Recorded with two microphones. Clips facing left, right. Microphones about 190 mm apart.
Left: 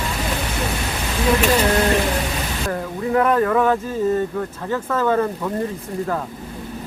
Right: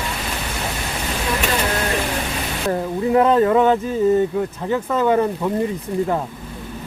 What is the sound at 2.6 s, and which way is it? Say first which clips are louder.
Speech: right 5 dB; 20° right (ahead or behind).